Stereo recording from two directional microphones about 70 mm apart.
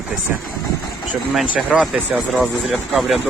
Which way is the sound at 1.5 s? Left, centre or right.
Centre.